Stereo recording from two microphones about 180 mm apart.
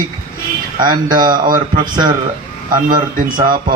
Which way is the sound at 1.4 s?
50° right (ahead or behind).